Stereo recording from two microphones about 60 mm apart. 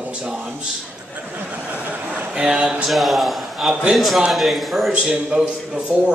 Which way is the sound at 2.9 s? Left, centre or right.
Centre.